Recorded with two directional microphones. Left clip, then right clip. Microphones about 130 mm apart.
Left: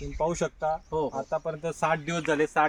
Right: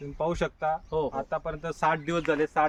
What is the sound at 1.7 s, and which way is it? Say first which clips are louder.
Speech: right 2 dB; 90° left.